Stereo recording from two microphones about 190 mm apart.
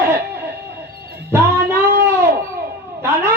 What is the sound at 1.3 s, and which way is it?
Music, 10° right (ahead or behind).